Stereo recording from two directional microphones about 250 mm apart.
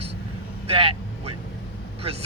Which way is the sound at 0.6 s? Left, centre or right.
Right.